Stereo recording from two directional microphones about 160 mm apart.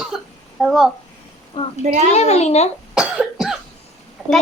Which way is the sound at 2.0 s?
40° left (ahead or behind).